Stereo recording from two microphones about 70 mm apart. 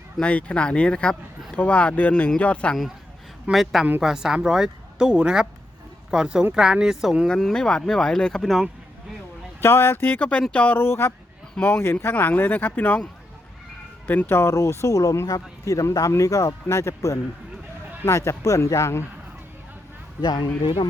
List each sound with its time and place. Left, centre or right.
0.2 s speech: centre
3.5 s a woman's voice: centre
7.3 s speech: centre
9.6 s speech: left
10.8 s speech: left
14.1 s speech: left
20.2 s speech: left